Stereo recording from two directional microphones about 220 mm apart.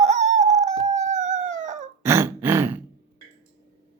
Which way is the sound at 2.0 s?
10° right (ahead or behind).